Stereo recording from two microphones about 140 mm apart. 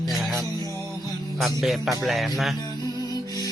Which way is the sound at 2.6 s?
25° left (ahead or behind).